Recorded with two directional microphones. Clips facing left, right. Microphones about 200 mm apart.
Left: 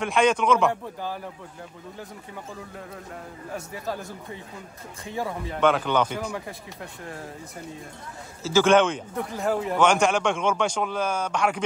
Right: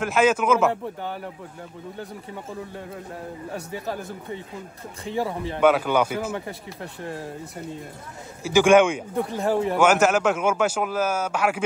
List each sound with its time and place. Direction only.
0.0 s a man's voice: 5° right (ahead or behind)
5.0 s speech: 30° right (ahead or behind)
5.6 s speech: 10° right (ahead or behind)
8.5 s speech: 15° right (ahead or behind)
9.1 s speech: 30° right (ahead or behind)
9.7 s a man's voice: 5° right (ahead or behind)